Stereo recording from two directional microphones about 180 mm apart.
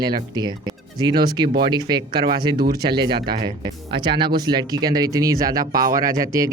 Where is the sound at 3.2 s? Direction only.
60° right (ahead or behind).